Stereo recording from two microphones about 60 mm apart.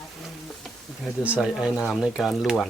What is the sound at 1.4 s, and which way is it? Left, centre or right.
Speech, centre.